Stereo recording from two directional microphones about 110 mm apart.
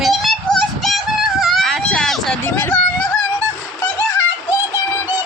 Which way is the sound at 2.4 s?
25° left (ahead or behind).